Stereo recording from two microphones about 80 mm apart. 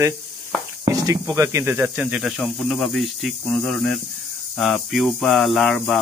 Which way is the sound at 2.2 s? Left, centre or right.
Centre.